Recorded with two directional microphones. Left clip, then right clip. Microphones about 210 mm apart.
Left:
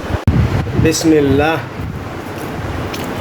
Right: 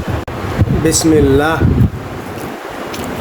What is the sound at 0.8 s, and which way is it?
Speech, 15° right (ahead or behind).